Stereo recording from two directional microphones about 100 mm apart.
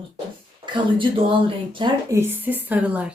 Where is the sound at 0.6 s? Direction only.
55° right (ahead or behind).